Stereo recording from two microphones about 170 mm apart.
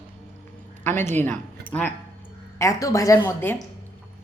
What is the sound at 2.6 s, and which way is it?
Speech, 20° left (ahead or behind).